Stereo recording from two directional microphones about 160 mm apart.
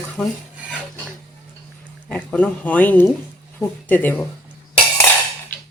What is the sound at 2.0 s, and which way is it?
Speech, 10° left (ahead or behind).